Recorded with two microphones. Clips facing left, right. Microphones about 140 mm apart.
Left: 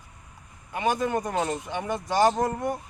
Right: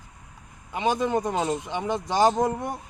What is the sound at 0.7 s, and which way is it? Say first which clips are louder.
Speech: right 1 dB; 20° right (ahead or behind).